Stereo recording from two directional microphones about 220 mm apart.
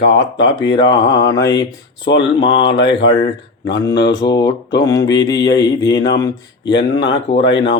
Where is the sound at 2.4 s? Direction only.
20° left (ahead or behind).